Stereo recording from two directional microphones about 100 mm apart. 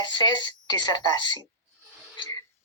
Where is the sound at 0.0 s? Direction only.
45° left (ahead or behind).